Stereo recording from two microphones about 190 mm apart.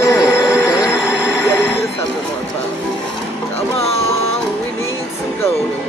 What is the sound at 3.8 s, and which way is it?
Speech, 30° left (ahead or behind).